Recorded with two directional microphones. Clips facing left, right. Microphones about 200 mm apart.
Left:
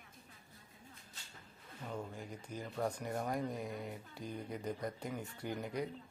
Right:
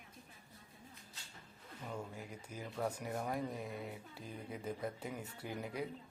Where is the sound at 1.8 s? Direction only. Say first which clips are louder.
Left 2 dB; 5° right (ahead or behind).